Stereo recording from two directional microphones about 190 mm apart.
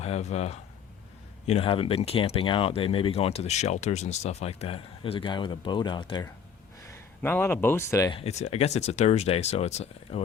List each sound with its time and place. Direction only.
0.0 s speech: 35° left (ahead or behind)
6.9 s speech: 10° left (ahead or behind)
8.2 s speech: 35° left (ahead or behind)